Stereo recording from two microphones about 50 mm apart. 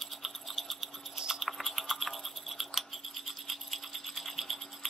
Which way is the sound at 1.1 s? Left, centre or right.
Centre.